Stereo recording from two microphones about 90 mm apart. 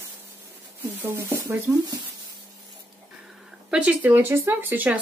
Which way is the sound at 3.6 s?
15° right (ahead or behind).